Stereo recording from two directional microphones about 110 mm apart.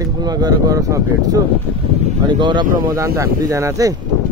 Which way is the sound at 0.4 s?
35° right (ahead or behind).